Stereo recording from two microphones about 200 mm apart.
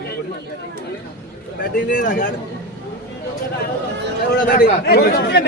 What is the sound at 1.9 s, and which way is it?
Speech, 45° left (ahead or behind).